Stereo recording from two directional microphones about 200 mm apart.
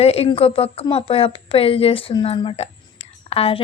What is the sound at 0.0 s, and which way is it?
A woman's voice, 30° left (ahead or behind).